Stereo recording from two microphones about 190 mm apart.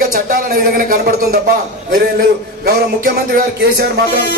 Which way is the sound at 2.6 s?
50° right (ahead or behind).